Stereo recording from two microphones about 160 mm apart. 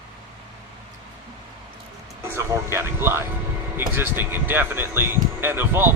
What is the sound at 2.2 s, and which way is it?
Speech, 15° right (ahead or behind).